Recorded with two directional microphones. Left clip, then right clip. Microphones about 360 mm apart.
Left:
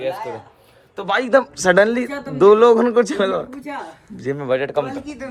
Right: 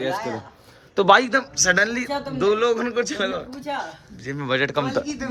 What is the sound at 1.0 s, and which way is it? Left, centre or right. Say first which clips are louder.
Speech: right 5 dB; centre.